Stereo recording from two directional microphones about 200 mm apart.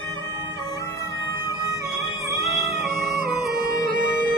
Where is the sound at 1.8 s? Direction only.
15° right (ahead or behind).